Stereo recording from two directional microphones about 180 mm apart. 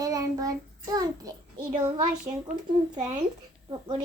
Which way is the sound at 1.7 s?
45° right (ahead or behind).